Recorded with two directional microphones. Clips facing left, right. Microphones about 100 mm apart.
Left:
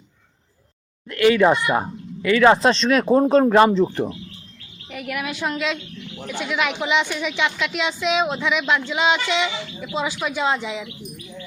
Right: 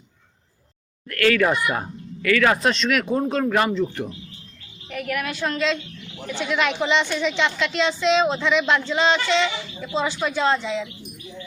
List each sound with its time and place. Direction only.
1.0 s speech: 20° left (ahead or behind)
4.9 s a woman's voice: 10° left (ahead or behind)